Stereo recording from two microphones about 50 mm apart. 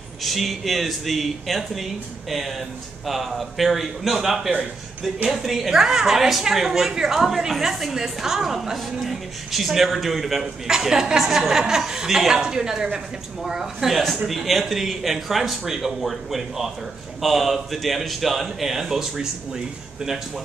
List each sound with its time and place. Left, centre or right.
0.2 s a woman's voice: centre